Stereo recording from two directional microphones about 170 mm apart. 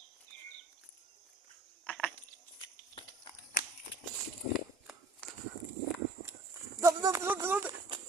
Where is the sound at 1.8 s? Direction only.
5° left (ahead or behind).